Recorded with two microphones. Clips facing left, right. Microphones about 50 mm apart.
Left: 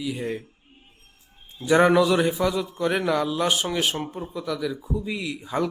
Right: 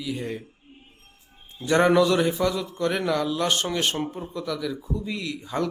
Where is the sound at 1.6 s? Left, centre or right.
Centre.